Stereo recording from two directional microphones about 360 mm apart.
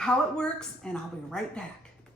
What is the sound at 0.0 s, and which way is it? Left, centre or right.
Speech, centre.